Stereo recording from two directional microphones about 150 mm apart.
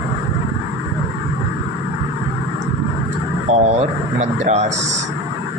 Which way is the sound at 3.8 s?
50° right (ahead or behind).